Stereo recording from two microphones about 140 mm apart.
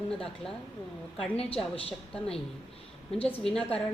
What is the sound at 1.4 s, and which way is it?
Speech, 40° left (ahead or behind).